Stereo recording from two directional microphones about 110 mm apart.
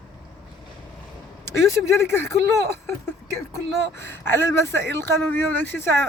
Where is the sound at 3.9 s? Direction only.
20° left (ahead or behind).